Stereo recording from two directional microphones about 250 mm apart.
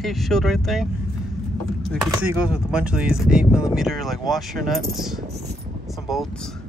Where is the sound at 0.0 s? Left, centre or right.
Centre.